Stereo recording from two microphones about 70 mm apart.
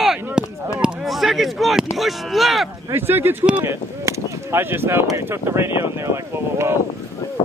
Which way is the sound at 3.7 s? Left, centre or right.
Right.